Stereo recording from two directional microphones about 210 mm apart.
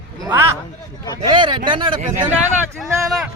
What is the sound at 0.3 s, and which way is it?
Speech, 10° right (ahead or behind).